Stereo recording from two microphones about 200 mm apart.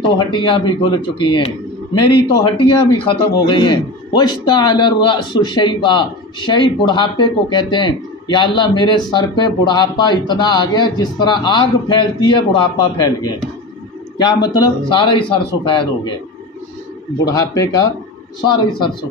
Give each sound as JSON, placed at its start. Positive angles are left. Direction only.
{"t": 0.2, "sound": "a man's voice", "side_deg": 25}
{"t": 17.2, "sound": "a man's voice", "side_deg": 20}